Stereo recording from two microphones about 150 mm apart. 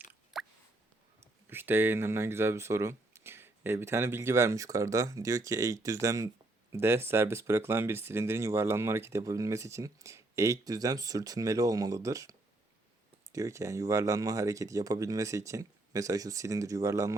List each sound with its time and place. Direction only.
0.3 s plop: centre (ahead or behind)
1.5 s speech: 15° right (ahead or behind)